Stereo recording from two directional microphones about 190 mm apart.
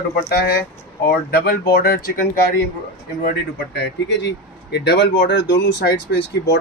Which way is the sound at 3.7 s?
65° left (ahead or behind).